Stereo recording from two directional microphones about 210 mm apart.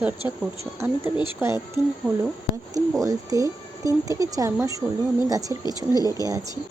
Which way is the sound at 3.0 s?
15° right (ahead or behind).